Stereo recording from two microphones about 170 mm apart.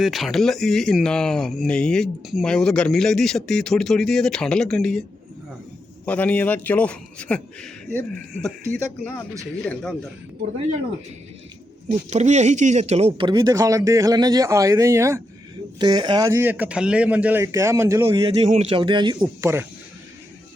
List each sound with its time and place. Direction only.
0.0 s speech: centre (ahead or behind)
6.1 s a man's voice: 10° left (ahead or behind)
11.9 s speech: 40° right (ahead or behind); by 18.3 s 20° right (ahead or behind)
18.4 s speech: 35° right (ahead or behind)
19.4 s speech: 15° right (ahead or behind)